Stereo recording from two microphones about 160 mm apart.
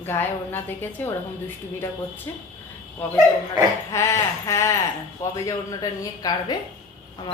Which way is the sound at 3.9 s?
20° left (ahead or behind).